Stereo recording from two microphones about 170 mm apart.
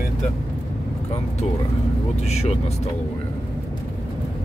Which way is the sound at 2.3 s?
40° left (ahead or behind).